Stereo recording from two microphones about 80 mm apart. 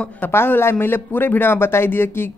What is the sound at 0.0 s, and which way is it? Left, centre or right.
Speech, left.